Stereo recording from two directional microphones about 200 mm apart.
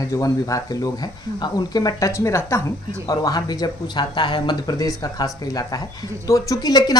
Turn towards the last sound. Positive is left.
turn(degrees=20)  # may be behind; listen again after turning